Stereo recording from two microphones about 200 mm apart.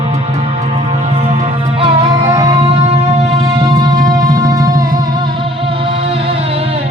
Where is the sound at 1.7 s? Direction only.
25° right (ahead or behind).